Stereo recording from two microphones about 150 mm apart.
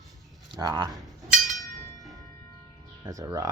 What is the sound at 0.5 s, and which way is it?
Speech, 30° right (ahead or behind).